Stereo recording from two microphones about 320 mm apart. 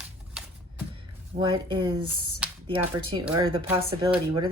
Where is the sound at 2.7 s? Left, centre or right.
Centre.